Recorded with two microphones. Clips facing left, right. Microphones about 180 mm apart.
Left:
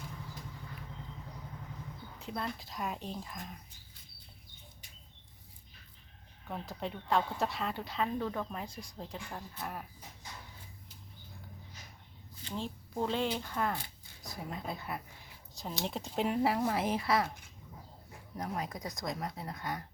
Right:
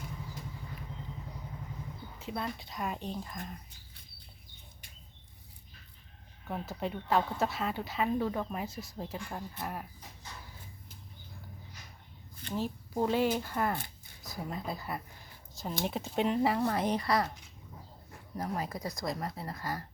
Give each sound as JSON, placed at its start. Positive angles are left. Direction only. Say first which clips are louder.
{"t": 2.1, "sound": "speech", "louder": "right 1 dB", "side_deg": 0}
{"t": 6.5, "sound": "speech", "louder": "right 3 dB", "side_deg": -5}
{"t": 13.0, "sound": "speech", "louder": "right 4 dB", "side_deg": -10}
{"t": 18.3, "sound": "speech", "louder": "right 2 dB", "side_deg": 0}